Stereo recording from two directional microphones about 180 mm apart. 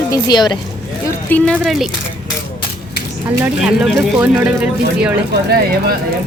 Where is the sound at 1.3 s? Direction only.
Centre (ahead or behind).